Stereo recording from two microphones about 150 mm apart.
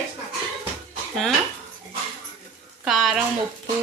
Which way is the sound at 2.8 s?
5° right (ahead or behind).